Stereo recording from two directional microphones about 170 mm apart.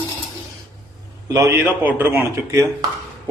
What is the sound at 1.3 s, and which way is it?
Speech, 15° right (ahead or behind).